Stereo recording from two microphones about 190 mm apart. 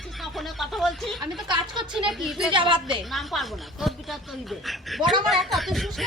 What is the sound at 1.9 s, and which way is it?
Speech, centre (ahead or behind).